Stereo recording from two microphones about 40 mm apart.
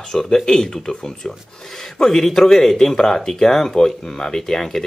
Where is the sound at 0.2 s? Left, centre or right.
Centre.